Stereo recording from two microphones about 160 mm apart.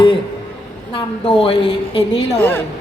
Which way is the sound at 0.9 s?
35° left (ahead or behind).